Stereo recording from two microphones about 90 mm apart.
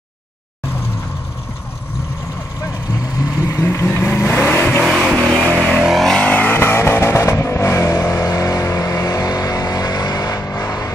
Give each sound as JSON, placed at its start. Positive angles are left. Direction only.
{"t": 3.4, "sound": "vehicle", "side_deg": 30}
{"t": 4.8, "sound": "music", "side_deg": -5}
{"t": 5.8, "sound": "vehicle", "side_deg": -5}
{"t": 6.0, "sound": "vehicle", "side_deg": 10}